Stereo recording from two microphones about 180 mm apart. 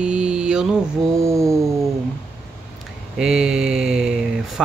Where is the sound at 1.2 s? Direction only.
15° right (ahead or behind).